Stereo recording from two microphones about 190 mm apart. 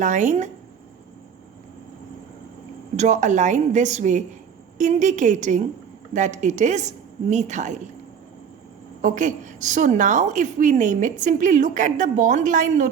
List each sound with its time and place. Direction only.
0.0 s a woman's voice: 40° right (ahead or behind)
2.9 s a woman's voice: 40° right (ahead or behind)
9.0 s a woman's voice: 45° right (ahead or behind)